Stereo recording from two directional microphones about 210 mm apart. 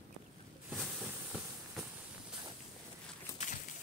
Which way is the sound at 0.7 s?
Centre (ahead or behind).